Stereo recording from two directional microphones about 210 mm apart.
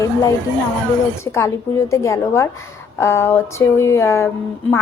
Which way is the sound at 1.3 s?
15° left (ahead or behind).